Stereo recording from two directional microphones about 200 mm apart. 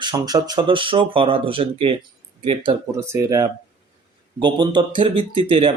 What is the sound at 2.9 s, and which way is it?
Speech, 15° right (ahead or behind).